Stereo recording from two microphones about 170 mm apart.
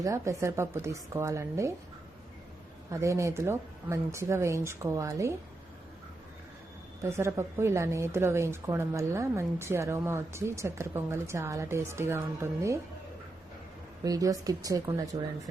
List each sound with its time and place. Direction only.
0.0 s speech: 20° right (ahead or behind)
2.9 s speech: 15° right (ahead or behind)
7.0 s speech: 15° right (ahead or behind)
14.0 s speech: 20° right (ahead or behind)